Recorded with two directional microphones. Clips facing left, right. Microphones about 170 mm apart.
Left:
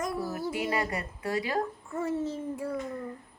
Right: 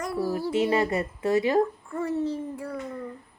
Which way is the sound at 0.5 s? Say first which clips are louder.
Right 9 dB; 25° right (ahead or behind).